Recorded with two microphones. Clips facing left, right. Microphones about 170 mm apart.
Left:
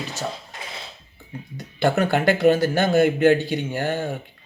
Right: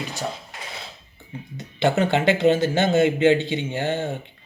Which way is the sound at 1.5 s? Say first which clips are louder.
Even; 25° right (ahead or behind).